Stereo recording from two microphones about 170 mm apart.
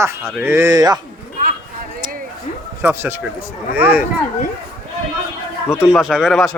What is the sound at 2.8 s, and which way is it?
Speech, 10° right (ahead or behind).